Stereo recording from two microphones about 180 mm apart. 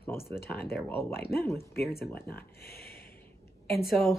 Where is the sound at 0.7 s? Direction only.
10° left (ahead or behind).